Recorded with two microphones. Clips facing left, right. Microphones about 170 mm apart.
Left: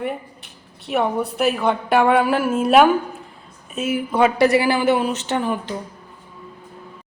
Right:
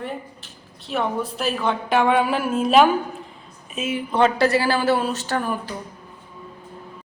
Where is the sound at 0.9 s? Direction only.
65° left (ahead or behind).